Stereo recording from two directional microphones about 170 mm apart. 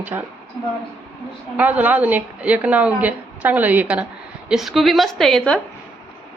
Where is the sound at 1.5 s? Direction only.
10° right (ahead or behind).